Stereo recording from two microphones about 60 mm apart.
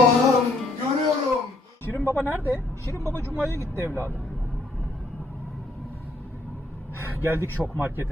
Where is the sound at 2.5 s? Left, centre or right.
Left.